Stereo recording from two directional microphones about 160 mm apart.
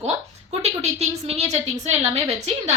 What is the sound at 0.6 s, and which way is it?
A woman's voice, 45° right (ahead or behind).